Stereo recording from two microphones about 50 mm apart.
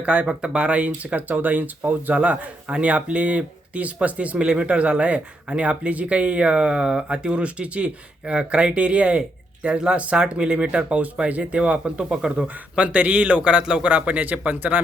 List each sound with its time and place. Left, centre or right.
0.0 s speech: right